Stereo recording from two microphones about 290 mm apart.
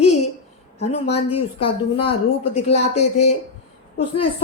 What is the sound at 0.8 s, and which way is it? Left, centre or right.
A woman's voice, left.